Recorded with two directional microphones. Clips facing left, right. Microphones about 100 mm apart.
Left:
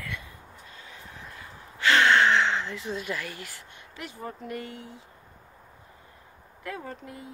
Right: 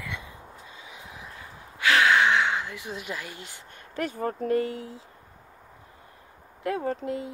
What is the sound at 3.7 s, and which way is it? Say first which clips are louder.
Speech: right 15 dB; 50° right (ahead or behind).